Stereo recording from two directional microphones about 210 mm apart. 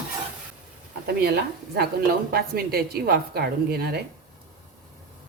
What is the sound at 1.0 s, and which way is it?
A woman's voice, 50° right (ahead or behind).